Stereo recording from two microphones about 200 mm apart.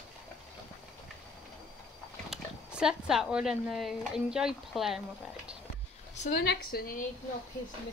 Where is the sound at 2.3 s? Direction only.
5° right (ahead or behind).